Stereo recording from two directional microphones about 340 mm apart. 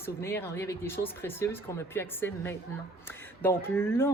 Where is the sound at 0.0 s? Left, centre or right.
Centre.